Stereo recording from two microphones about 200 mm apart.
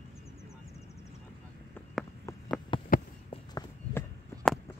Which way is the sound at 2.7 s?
25° left (ahead or behind).